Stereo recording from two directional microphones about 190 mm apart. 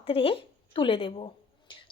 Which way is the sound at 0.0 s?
30° left (ahead or behind).